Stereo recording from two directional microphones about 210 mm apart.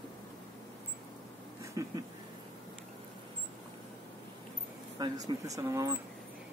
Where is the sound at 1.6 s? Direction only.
15° right (ahead or behind).